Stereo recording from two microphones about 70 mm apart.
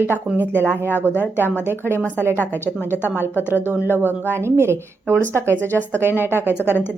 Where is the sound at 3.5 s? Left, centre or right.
Right.